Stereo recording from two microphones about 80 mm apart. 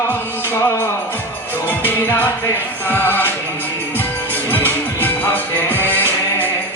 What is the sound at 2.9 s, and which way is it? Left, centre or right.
Music, left.